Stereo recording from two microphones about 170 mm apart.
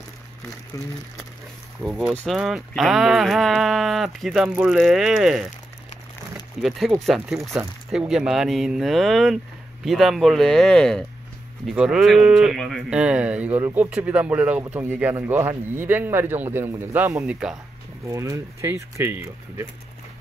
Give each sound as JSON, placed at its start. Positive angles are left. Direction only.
{"t": 0.7, "sound": "speech", "side_deg": 20}
{"t": 1.8, "sound": "speech", "side_deg": -5}
{"t": 6.6, "sound": "speech", "side_deg": 0}
{"t": 18.0, "sound": "speech", "side_deg": -20}